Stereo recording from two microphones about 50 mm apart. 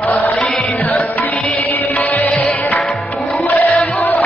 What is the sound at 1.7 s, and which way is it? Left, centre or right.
Music, left.